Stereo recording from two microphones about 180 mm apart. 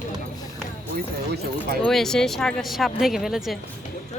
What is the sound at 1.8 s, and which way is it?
Speech, 5° left (ahead or behind).